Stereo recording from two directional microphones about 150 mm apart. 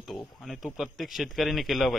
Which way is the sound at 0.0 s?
Centre (ahead or behind).